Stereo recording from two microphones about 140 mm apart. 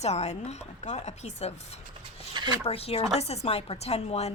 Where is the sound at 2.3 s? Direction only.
30° right (ahead or behind).